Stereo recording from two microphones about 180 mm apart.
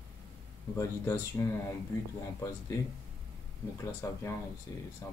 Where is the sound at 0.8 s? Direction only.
15° left (ahead or behind).